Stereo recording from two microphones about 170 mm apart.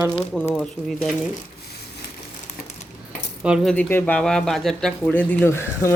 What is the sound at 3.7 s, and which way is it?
Speech, 10° left (ahead or behind).